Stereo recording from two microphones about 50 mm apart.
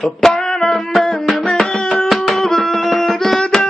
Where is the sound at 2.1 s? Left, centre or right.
Centre.